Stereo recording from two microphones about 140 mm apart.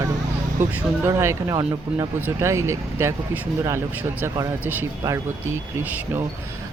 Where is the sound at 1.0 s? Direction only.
20° right (ahead or behind).